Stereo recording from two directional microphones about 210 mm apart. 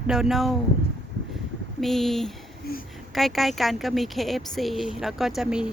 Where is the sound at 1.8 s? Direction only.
Centre (ahead or behind).